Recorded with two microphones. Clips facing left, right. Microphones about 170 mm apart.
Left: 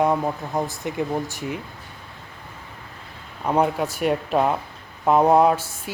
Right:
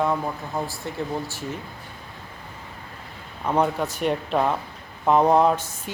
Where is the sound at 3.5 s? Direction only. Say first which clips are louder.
Left 2 dB; 10° left (ahead or behind).